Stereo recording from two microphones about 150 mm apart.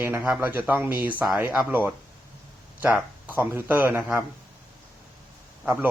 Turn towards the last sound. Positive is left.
turn(degrees=-10)  # may be behind; listen again after turning